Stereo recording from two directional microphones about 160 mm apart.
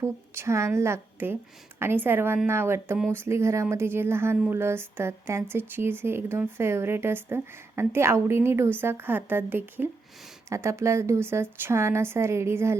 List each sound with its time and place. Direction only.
0.0 s speech: 15° right (ahead or behind)